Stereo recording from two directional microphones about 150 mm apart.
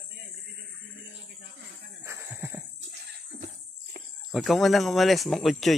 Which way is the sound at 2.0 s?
15° right (ahead or behind).